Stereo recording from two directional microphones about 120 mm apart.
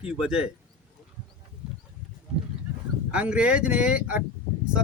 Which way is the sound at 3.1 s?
10° right (ahead or behind).